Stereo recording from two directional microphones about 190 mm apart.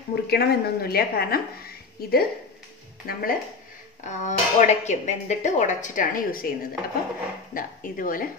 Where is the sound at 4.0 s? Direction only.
40° left (ahead or behind).